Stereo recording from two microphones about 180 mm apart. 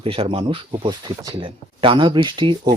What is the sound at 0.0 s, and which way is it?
Speech, 30° right (ahead or behind).